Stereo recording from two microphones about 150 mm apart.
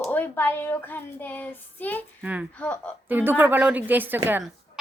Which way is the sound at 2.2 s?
10° right (ahead or behind).